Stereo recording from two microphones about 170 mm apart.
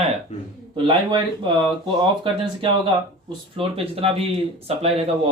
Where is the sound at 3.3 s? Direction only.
30° right (ahead or behind).